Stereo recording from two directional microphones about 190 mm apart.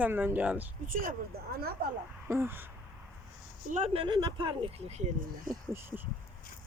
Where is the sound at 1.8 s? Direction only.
50° right (ahead or behind).